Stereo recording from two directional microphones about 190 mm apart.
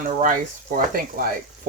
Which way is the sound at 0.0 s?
45° right (ahead or behind).